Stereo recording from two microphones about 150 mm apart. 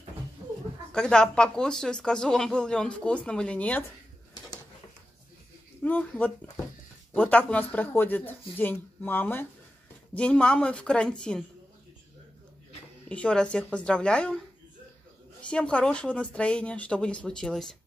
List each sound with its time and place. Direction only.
0.9 s speech: 5° left (ahead or behind)
5.8 s speech: 10° left (ahead or behind)
13.1 s speech: 5° left (ahead or behind)
15.4 s speech: 5° left (ahead or behind)